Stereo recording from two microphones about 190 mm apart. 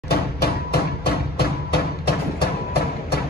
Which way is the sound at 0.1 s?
55° left (ahead or behind).